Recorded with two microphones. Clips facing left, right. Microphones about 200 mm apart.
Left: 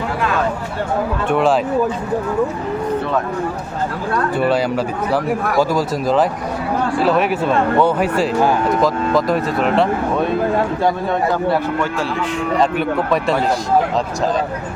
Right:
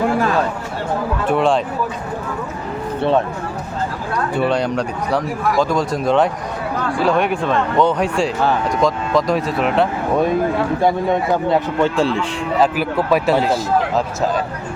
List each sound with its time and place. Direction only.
1.3 s speech: centre (ahead or behind)
4.4 s speech: 5° left (ahead or behind)
10.8 s a man's voice: 20° right (ahead or behind)
12.5 s speech: 5° right (ahead or behind)